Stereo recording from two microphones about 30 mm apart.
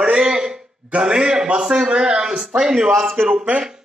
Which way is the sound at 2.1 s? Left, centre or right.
Centre.